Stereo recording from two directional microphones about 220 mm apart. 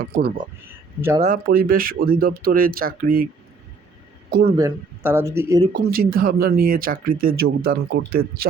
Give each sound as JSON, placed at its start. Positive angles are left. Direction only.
{"t": 0.0, "sound": "speech", "side_deg": -45}
{"t": 4.3, "sound": "speech", "side_deg": -40}
{"t": 4.5, "sound": "speech", "side_deg": -15}
{"t": 5.9, "sound": "speech", "side_deg": -40}